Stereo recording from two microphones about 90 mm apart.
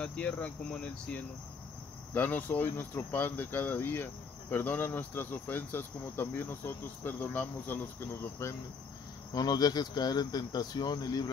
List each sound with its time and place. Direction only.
0.0 s speech: 15° left (ahead or behind)
9.3 s speech: 50° left (ahead or behind)